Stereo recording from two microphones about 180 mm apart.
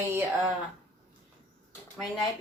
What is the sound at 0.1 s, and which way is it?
Speech, 10° right (ahead or behind).